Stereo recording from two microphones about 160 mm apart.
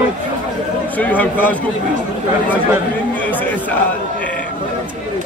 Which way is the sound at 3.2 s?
10° left (ahead or behind).